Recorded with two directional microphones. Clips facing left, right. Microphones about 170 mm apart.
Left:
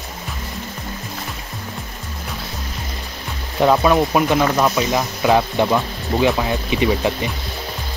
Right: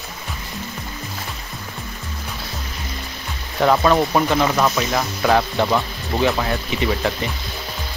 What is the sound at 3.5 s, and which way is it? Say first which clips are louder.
Speech: left 1 dB; 15° left (ahead or behind).